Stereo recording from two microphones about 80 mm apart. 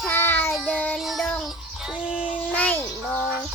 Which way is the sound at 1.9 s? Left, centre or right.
Centre.